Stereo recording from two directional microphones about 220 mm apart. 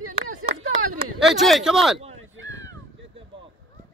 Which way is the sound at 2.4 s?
15° left (ahead or behind).